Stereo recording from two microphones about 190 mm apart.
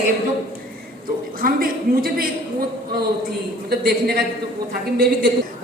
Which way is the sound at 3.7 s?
55° right (ahead or behind).